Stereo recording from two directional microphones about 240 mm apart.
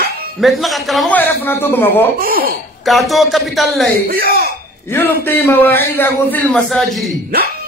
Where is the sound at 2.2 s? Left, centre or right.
Right.